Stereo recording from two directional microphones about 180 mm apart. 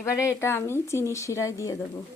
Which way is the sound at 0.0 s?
15° left (ahead or behind).